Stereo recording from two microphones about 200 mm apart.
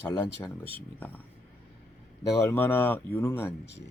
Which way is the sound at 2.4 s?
10° left (ahead or behind).